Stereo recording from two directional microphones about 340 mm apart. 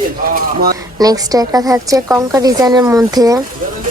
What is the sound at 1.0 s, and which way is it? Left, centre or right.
Speech, centre.